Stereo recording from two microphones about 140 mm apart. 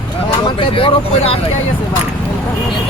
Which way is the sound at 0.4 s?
40° left (ahead or behind).